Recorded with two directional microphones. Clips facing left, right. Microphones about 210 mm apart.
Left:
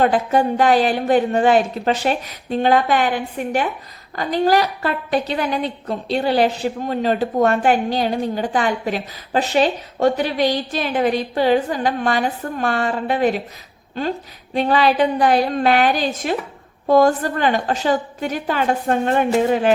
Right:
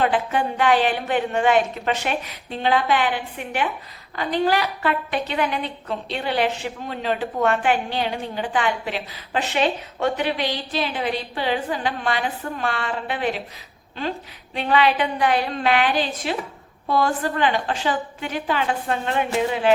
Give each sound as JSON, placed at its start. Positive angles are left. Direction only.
{"t": 0.0, "sound": "a woman's voice", "side_deg": 40}
{"t": 14.5, "sound": "a woman's voice", "side_deg": 40}